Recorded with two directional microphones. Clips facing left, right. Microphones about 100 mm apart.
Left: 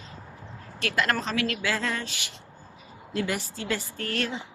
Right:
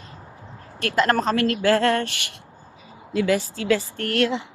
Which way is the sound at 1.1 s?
50° right (ahead or behind).